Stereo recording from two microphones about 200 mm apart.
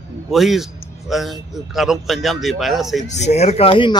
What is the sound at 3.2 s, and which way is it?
Speech, 35° left (ahead or behind).